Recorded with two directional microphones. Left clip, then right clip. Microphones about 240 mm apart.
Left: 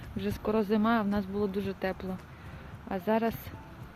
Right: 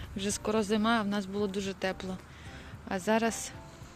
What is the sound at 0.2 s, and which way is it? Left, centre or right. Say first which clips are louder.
Speech: left 1 dB; centre.